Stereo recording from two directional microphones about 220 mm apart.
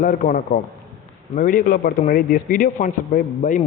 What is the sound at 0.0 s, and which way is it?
Speech, 35° left (ahead or behind).